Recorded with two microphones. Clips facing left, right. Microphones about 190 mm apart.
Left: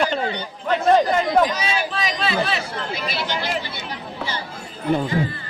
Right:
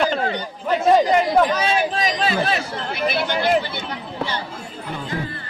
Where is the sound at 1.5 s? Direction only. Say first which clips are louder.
Right 4 dB; 55° right (ahead or behind).